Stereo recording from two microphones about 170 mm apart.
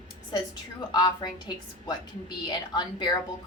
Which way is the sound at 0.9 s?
25° left (ahead or behind).